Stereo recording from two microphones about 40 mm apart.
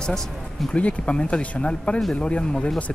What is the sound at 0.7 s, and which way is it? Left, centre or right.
Speech, left.